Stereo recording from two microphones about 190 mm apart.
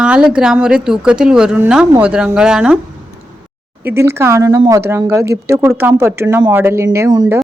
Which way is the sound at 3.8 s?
10° right (ahead or behind).